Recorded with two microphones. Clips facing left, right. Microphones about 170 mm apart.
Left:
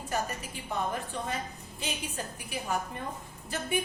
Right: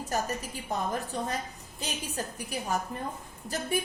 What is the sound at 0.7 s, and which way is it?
A woman's voice, 40° right (ahead or behind).